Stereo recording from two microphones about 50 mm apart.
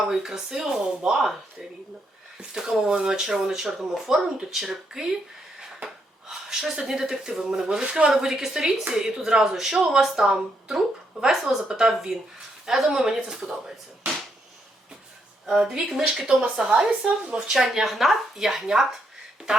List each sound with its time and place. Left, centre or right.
0.0 s speech: centre
2.4 s a woman's voice: centre
5.5 s a sound: centre
6.8 s speech: centre
15.4 s speech: centre
17.5 s a woman's voice: centre